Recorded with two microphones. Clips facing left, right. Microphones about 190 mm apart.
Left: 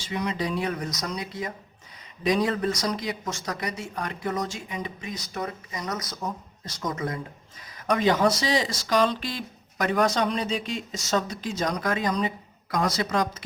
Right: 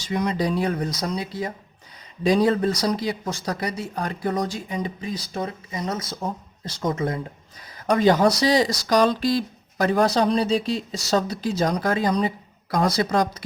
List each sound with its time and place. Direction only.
0.0 s speech: 40° right (ahead or behind)